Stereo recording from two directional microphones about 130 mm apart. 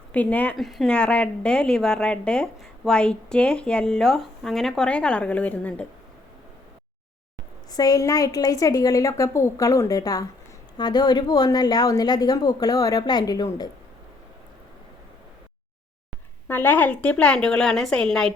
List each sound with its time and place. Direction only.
0.1 s speech: 10° left (ahead or behind)
0.5 s a woman's voice: centre (ahead or behind)
7.7 s a woman's voice: 30° left (ahead or behind)
16.5 s a woman's voice: 15° left (ahead or behind)